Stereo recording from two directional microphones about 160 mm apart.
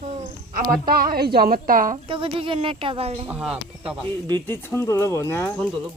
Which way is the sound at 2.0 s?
35° right (ahead or behind).